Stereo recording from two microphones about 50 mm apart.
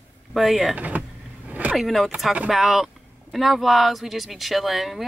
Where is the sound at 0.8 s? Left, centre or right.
Right.